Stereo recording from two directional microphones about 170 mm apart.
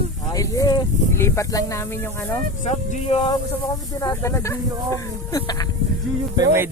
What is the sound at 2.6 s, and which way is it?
Speech, 45° left (ahead or behind).